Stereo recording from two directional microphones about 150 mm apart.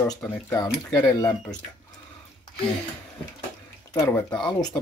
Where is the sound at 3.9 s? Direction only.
20° left (ahead or behind).